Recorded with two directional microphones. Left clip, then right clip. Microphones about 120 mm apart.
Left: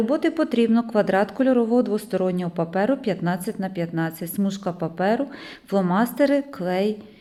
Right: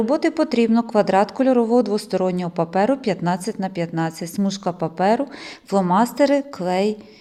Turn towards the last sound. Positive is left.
turn(degrees=-30)  # may be behind; listen again after turning